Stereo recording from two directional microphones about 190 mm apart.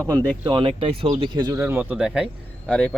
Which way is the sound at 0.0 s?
20° right (ahead or behind).